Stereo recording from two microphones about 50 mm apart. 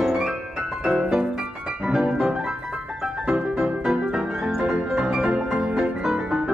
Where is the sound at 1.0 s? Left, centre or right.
Centre.